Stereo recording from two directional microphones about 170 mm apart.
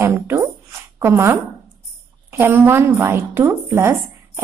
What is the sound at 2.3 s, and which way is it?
A woman's voice, 15° right (ahead or behind).